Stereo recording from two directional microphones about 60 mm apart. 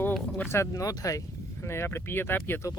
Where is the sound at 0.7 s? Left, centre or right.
Left.